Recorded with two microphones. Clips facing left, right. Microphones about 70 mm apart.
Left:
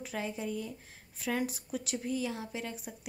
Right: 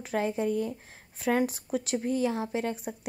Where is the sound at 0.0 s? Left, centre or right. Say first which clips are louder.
Right 8 dB; right.